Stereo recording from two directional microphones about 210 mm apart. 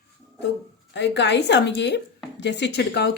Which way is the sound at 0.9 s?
55° left (ahead or behind).